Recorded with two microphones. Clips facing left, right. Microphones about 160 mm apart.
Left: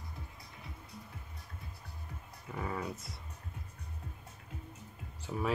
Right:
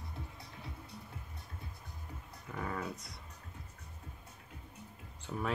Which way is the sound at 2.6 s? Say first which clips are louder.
Left 1 dB; 5° left (ahead or behind).